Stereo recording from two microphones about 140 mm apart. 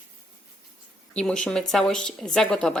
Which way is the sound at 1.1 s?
5° left (ahead or behind).